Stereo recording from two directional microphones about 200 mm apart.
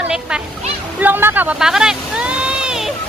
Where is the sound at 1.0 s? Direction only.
10° right (ahead or behind).